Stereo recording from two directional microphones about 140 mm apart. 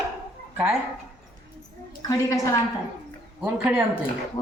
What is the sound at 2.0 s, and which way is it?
Speech, 25° left (ahead or behind).